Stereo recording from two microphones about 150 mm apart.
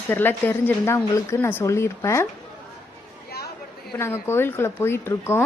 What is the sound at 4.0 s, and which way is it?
A woman's voice, 15° left (ahead or behind).